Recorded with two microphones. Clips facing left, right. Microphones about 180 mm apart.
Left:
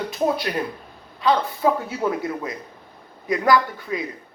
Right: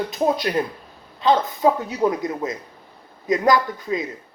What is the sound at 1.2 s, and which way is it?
A man's voice, 20° right (ahead or behind).